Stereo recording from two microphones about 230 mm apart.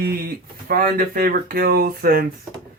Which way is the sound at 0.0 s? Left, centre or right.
Right.